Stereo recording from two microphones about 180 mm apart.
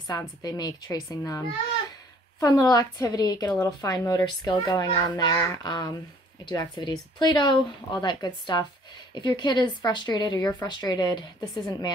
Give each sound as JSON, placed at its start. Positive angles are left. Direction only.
{"t": 0.0, "sound": "speech", "side_deg": 20}
{"t": 2.4, "sound": "speech", "side_deg": 20}